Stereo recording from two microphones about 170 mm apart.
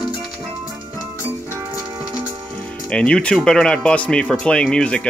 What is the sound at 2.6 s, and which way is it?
Speech, 5° left (ahead or behind).